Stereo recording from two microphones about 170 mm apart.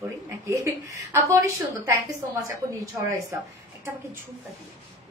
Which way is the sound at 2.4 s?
20° right (ahead or behind).